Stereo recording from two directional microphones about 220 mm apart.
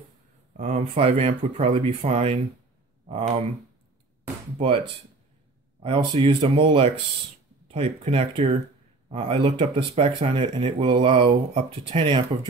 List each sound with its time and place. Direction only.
0.6 s speech: 30° right (ahead or behind)
4.6 s speech: 25° right (ahead or behind)